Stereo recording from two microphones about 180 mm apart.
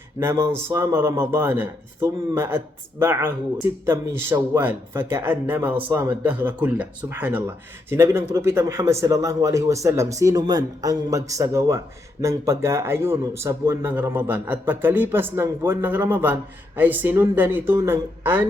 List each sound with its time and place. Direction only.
0.2 s speech: 15° right (ahead or behind)